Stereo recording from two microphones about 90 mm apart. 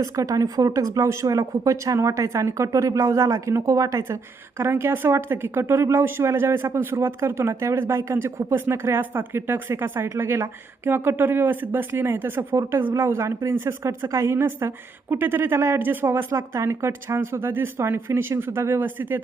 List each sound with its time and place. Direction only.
0.0 s speech: 40° right (ahead or behind); by 19.2 s 20° right (ahead or behind)